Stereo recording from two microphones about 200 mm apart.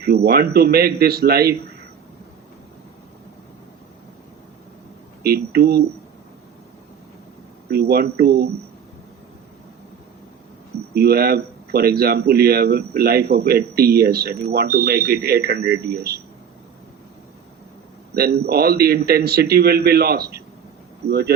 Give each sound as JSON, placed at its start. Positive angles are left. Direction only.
{"t": 0.0, "sound": "speech", "side_deg": -50}
{"t": 5.2, "sound": "speech", "side_deg": -50}
{"t": 7.7, "sound": "speech", "side_deg": -50}
{"t": 10.9, "sound": "speech", "side_deg": -50}
{"t": 18.1, "sound": "speech", "side_deg": -50}